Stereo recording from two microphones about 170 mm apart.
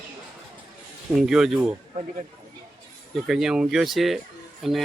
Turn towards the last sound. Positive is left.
turn(degrees=0)  # may be behind; listen again after turning